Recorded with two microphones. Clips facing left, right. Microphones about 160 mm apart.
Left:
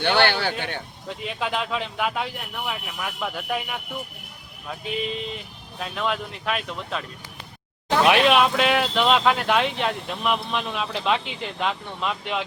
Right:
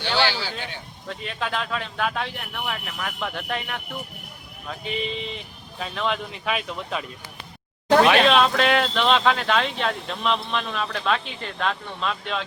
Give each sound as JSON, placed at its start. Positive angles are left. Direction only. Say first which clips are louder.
{"t": 0.0, "sound": "a man's voice", "louder": "left 4 dB", "side_deg": 60}
{"t": 1.0, "sound": "speech", "louder": "even", "side_deg": 15}
{"t": 8.0, "sound": "speech", "louder": "even", "side_deg": 10}